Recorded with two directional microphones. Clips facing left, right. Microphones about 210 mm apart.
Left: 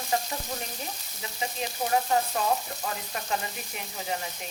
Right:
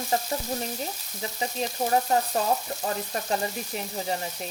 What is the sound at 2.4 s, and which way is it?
A woman's voice, 35° right (ahead or behind).